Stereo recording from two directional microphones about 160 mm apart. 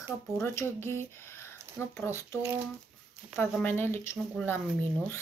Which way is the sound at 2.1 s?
15° left (ahead or behind).